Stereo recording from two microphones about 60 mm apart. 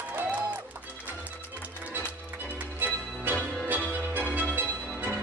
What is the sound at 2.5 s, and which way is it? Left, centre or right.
Music, right.